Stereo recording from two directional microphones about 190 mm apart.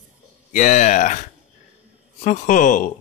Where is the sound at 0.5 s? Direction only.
40° left (ahead or behind).